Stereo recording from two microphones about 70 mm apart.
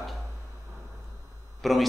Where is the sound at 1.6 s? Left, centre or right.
Centre.